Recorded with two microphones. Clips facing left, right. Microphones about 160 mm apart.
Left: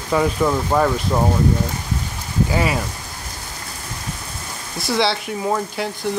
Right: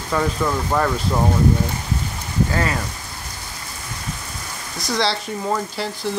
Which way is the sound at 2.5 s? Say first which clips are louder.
Left 4 dB; 10° left (ahead or behind).